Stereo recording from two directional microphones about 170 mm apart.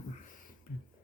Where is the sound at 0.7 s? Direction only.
50° left (ahead or behind).